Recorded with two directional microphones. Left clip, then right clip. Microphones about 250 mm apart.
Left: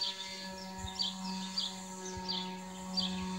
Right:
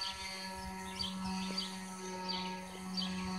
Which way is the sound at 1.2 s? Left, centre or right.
Left.